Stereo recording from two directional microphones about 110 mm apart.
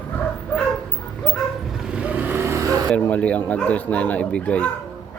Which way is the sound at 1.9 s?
15° right (ahead or behind).